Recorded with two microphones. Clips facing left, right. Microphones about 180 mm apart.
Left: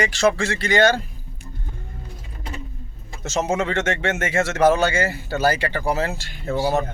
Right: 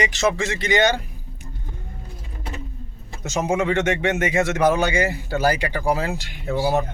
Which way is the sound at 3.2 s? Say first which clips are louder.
Right 1 dB; 15° right (ahead or behind).